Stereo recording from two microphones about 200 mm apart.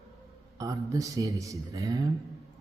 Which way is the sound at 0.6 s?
15° right (ahead or behind).